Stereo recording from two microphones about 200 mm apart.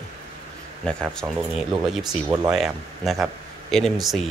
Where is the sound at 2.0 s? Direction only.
20° right (ahead or behind).